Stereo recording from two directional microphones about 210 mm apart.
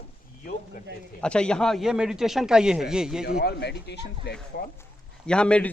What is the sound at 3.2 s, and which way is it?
Speech, 50° left (ahead or behind).